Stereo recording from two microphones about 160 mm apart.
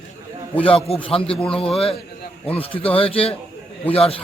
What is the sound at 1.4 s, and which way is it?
Speech, 5° left (ahead or behind).